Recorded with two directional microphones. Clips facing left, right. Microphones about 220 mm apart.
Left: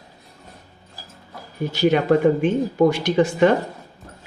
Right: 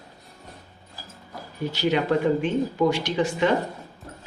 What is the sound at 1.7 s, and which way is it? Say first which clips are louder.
Speech: left 6 dB; 50° left (ahead or behind).